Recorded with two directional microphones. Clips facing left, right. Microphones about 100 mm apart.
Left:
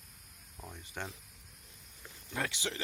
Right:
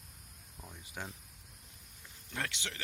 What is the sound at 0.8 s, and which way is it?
Speech, 5° right (ahead or behind).